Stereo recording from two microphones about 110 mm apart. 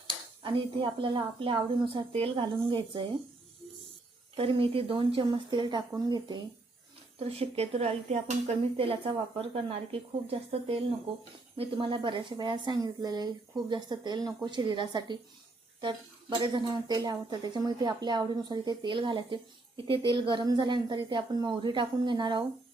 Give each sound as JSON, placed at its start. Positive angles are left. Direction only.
{"t": 0.4, "sound": "speech", "side_deg": -50}
{"t": 4.4, "sound": "speech", "side_deg": -55}
{"t": 7.2, "sound": "speech", "side_deg": -65}